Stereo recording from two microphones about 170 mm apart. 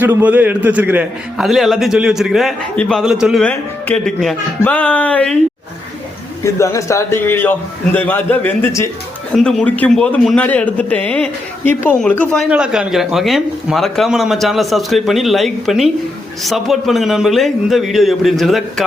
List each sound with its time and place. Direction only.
0.0 s speech: 10° right (ahead or behind)
3.4 s a man's voice: 10° left (ahead or behind)
6.4 s a man's voice: 20° left (ahead or behind)
9.3 s a man's voice: 5° left (ahead or behind)
12.5 s speech: 5° right (ahead or behind)